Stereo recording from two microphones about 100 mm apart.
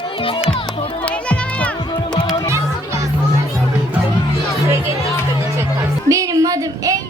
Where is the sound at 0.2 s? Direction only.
65° left (ahead or behind).